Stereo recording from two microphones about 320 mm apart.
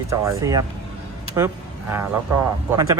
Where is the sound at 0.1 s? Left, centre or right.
Centre.